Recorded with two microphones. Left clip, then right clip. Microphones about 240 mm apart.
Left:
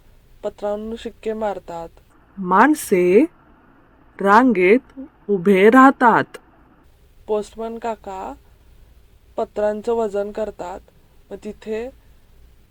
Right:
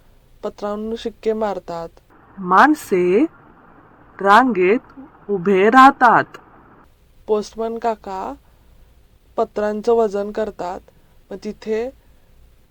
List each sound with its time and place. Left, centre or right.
0.4 s speech: right
2.5 s speech: left
7.3 s speech: right